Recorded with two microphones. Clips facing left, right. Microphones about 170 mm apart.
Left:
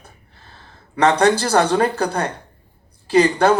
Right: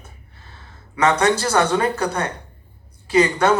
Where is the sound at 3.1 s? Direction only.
60° left (ahead or behind).